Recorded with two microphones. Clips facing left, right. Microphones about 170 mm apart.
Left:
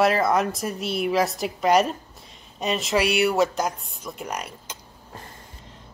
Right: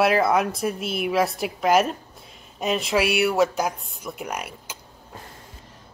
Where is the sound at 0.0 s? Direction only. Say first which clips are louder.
Right 1 dB; centre (ahead or behind).